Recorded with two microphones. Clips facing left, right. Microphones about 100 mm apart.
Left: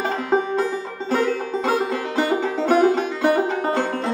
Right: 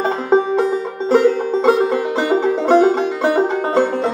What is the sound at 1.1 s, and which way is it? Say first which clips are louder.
Music: right 8 dB; 25° right (ahead or behind).